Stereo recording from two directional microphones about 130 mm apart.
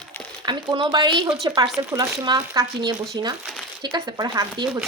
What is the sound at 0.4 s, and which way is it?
Speech, 35° right (ahead or behind).